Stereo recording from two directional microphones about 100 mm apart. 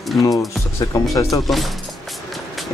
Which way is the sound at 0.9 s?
35° left (ahead or behind).